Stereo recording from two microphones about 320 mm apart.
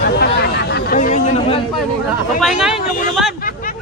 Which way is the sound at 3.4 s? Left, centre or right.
Left.